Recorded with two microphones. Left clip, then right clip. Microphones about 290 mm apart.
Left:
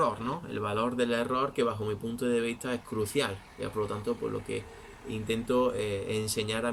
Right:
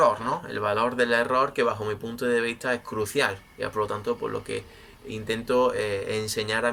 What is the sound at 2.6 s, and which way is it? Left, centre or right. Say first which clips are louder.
Speech: right 6 dB; centre.